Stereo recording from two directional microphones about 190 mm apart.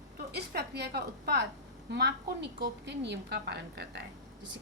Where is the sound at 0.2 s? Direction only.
60° right (ahead or behind).